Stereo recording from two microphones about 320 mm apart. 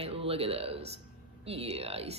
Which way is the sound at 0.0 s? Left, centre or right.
Centre.